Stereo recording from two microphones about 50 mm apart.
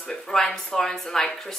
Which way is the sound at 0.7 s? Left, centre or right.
Centre.